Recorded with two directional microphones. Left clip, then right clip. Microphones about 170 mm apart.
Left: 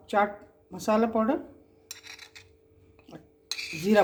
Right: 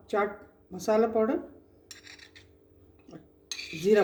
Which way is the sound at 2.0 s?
35° left (ahead or behind).